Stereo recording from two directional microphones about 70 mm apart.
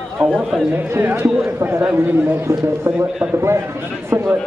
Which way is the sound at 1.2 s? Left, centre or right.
Right.